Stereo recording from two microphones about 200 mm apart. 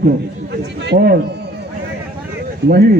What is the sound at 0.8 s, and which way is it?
Speech, 55° right (ahead or behind).